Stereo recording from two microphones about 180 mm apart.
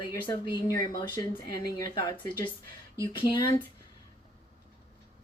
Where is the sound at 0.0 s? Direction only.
25° left (ahead or behind).